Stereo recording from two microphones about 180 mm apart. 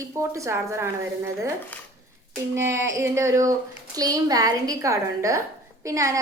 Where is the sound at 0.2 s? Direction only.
15° right (ahead or behind).